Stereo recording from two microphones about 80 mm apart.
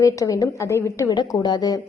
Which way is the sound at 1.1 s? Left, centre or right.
Left.